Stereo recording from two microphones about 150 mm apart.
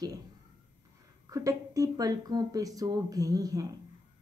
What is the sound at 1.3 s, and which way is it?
A woman's voice, 25° right (ahead or behind).